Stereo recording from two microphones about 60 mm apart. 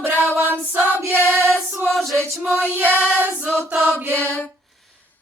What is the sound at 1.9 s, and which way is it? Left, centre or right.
Choir, centre.